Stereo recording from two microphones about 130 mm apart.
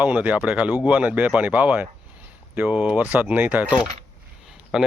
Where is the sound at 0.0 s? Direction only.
10° right (ahead or behind).